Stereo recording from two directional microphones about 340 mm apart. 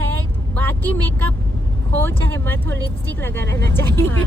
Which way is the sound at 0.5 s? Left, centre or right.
Centre.